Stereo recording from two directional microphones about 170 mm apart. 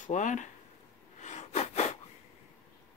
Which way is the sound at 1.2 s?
40° left (ahead or behind).